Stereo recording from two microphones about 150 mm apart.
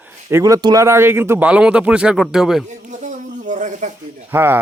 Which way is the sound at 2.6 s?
55° right (ahead or behind).